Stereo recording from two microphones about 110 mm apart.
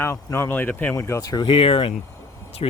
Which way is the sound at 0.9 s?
30° left (ahead or behind).